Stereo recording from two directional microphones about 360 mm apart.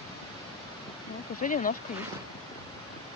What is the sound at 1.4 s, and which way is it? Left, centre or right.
Speech, left.